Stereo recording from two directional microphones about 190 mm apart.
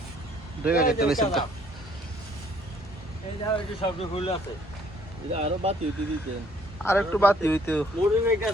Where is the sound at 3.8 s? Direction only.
30° left (ahead or behind).